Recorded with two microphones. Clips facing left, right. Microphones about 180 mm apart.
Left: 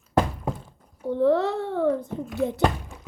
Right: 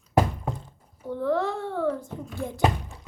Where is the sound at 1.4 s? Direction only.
65° left (ahead or behind).